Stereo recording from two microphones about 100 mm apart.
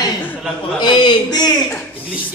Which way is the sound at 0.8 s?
50° left (ahead or behind).